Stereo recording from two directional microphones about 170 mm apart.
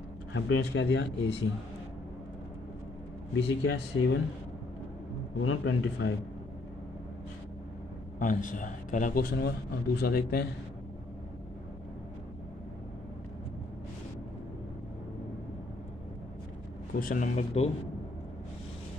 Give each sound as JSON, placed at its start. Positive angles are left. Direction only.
{"t": 0.3, "sound": "speech", "side_deg": 90}
{"t": 3.3, "sound": "speech", "side_deg": 90}
{"t": 5.6, "sound": "speech", "side_deg": 90}
{"t": 8.2, "sound": "a man's voice", "side_deg": 50}
{"t": 17.0, "sound": "a man's voice", "side_deg": 50}